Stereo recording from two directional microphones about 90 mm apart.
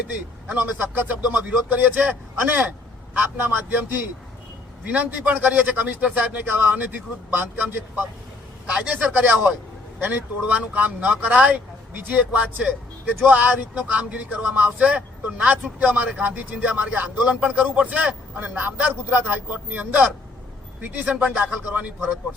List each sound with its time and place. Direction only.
0.5 s a man's voice: 20° right (ahead or behind)
3.2 s a man's voice: 20° right (ahead or behind)
8.6 s speech: 10° right (ahead or behind)